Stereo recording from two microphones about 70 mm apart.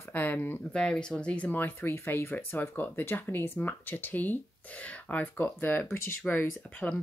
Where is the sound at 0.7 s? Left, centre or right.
Centre.